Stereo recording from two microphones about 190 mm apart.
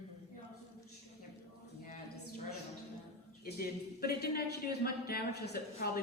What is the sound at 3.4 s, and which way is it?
A woman's voice, 55° left (ahead or behind).